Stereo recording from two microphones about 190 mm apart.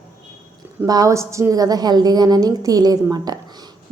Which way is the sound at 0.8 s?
20° right (ahead or behind).